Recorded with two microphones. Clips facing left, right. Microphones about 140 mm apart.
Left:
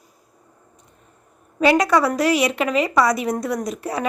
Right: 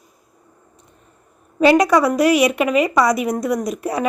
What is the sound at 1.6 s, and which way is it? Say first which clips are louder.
A woman's voice: right 3 dB; 20° right (ahead or behind).